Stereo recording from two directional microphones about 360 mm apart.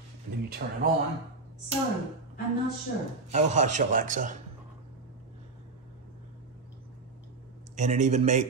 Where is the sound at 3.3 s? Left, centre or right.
Centre.